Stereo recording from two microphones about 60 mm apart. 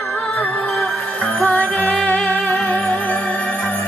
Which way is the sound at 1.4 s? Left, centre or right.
Left.